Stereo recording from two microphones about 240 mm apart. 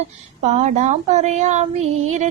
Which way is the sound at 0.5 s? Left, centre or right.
Right.